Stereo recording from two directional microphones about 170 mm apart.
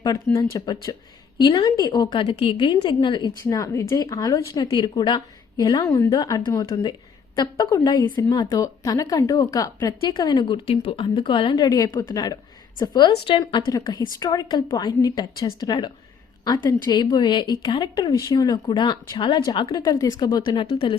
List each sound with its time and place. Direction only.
0.3 s a woman's voice: 20° left (ahead or behind)